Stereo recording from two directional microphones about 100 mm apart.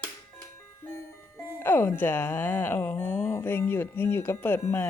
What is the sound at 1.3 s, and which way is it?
Speech, 25° left (ahead or behind).